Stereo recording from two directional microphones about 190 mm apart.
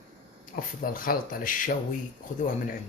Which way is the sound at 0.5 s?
50° left (ahead or behind).